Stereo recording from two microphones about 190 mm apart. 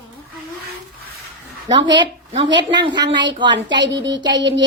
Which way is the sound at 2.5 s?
70° right (ahead or behind).